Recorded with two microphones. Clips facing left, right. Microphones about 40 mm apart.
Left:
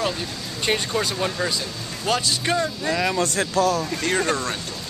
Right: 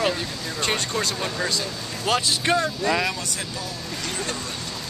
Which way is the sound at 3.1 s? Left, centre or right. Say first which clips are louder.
Left 9 dB; left.